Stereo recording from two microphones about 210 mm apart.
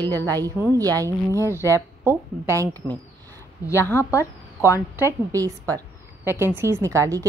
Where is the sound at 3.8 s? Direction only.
10° left (ahead or behind).